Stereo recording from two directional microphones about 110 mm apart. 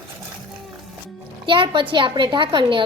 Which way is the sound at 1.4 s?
50° right (ahead or behind).